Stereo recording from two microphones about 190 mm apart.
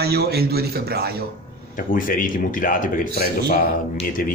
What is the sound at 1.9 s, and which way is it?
A man's voice, 45° left (ahead or behind).